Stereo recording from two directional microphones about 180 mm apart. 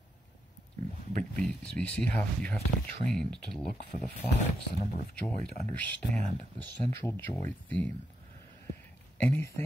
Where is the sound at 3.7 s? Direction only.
45° left (ahead or behind).